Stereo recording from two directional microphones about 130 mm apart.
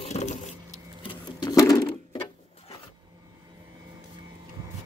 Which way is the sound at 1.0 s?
30° left (ahead or behind).